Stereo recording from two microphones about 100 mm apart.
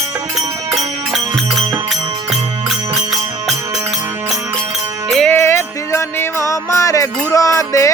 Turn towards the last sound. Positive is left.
turn(degrees=30)  # may be behind; listen again after turning